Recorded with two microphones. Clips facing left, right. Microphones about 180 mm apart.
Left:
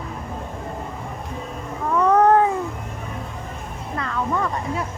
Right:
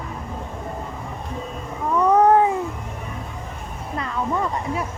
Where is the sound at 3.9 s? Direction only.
20° right (ahead or behind).